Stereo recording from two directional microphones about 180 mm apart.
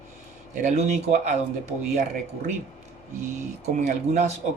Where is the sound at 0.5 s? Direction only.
40° right (ahead or behind).